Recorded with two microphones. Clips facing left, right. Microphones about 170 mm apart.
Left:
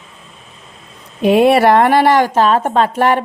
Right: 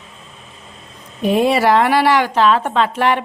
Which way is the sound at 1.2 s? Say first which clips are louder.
Left 5 dB; 70° left (ahead or behind).